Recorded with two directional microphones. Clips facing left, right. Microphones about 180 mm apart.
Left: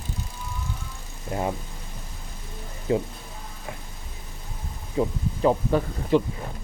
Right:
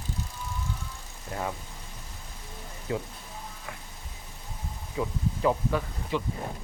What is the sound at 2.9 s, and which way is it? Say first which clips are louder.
Speech: left 8 dB; 25° left (ahead or behind).